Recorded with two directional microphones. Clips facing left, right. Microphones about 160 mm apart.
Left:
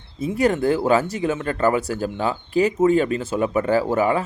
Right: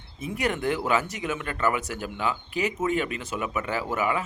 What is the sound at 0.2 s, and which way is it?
Speech, 30° left (ahead or behind).